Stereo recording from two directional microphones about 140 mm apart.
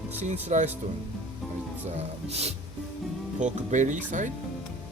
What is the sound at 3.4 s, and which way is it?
Speech, 60° right (ahead or behind).